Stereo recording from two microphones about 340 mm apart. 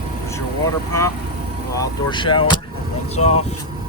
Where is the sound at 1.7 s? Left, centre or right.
Centre.